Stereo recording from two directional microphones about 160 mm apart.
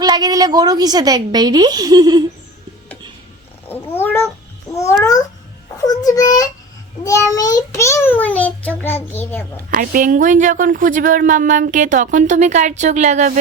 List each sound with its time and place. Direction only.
0.0 s a woman's voice: 25° right (ahead or behind)
3.7 s cat: 15° left (ahead or behind)
4.7 s babbling: 20° left (ahead or behind)
5.8 s a child's voice: 25° left (ahead or behind)
9.7 s a woman's voice: 60° right (ahead or behind)